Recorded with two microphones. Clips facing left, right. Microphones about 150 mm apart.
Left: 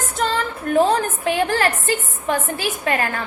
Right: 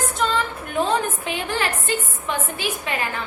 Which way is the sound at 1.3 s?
40° left (ahead or behind).